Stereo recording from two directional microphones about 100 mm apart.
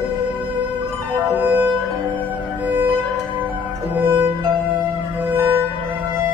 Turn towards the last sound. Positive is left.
turn(degrees=-20)  # may be behind; listen again after turning